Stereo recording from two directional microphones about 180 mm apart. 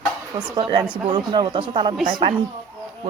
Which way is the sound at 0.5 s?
25° right (ahead or behind).